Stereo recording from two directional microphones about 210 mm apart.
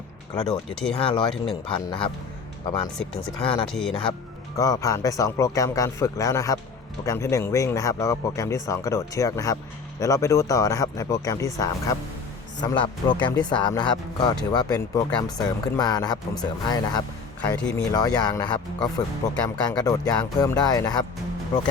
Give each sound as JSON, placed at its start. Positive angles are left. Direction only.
{"t": 0.4, "sound": "speech", "side_deg": 5}
{"t": 0.9, "sound": "speech", "side_deg": 25}
{"t": 1.3, "sound": "speech", "side_deg": 0}
{"t": 1.7, "sound": "speech", "side_deg": 25}
{"t": 3.0, "sound": "speech", "side_deg": 5}
{"t": 4.5, "sound": "speech", "side_deg": 15}
{"t": 17.6, "sound": "speech", "side_deg": 5}
{"t": 17.9, "sound": "speech", "side_deg": 20}
{"t": 19.5, "sound": "speech", "side_deg": 20}